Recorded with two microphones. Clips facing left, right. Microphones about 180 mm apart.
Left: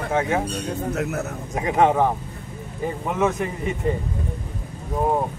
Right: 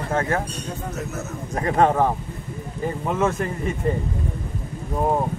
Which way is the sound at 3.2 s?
10° left (ahead or behind).